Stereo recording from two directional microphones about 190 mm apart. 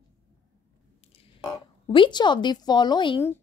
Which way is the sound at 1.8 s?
25° left (ahead or behind).